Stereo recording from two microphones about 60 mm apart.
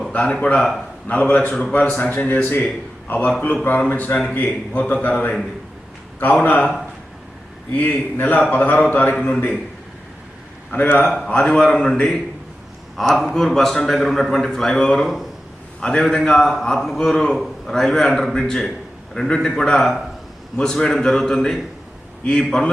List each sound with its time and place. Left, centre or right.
0.1 s a man's voice: left
7.7 s a man's voice: left
10.7 s a man's voice: left
11.3 s a man's voice: centre